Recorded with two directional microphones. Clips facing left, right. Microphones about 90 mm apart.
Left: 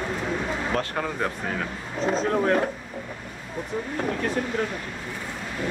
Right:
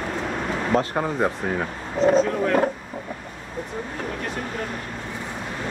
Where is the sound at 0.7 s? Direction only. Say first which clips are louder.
Right 5 dB; 25° right (ahead or behind).